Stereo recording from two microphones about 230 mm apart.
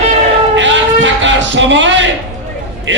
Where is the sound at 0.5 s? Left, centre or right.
Right.